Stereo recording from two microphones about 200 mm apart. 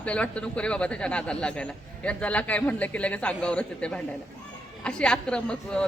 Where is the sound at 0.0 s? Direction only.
5° left (ahead or behind).